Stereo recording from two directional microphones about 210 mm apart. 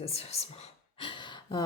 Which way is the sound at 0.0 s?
30° left (ahead or behind).